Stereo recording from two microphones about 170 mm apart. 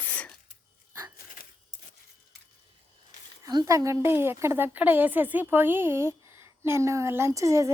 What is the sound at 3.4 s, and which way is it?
A woman's voice, 20° right (ahead or behind).